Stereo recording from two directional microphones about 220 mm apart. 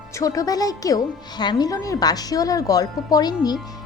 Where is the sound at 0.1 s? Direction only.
15° left (ahead or behind).